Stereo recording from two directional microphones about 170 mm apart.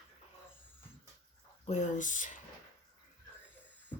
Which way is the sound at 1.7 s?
45° left (ahead or behind).